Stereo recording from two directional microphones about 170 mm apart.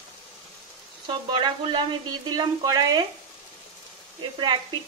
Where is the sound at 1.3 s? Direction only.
30° right (ahead or behind).